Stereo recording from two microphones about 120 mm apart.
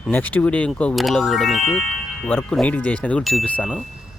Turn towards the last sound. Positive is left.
turn(degrees=10)  # may be behind; listen again after turning